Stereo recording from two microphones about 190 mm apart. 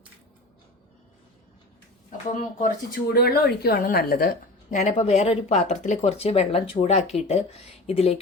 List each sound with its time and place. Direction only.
2.6 s a woman's voice: 45° left (ahead or behind)
4.8 s speech: 35° left (ahead or behind)